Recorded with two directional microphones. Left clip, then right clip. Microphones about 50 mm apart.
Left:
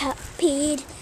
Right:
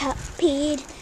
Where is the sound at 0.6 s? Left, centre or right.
Left.